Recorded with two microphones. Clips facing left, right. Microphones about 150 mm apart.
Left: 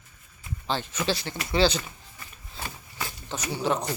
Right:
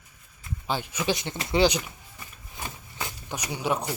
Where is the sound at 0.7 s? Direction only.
10° right (ahead or behind).